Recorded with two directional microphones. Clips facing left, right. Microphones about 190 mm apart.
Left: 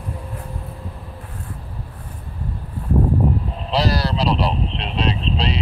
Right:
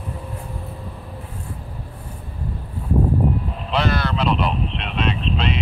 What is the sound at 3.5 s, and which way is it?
Speech, 35° left (ahead or behind).